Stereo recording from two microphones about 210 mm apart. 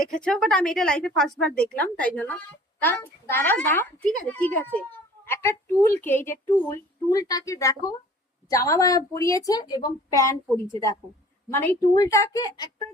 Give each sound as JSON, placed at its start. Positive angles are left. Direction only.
{"t": 0.2, "sound": "a woman's voice", "side_deg": 5}
{"t": 11.5, "sound": "a child's voice", "side_deg": 15}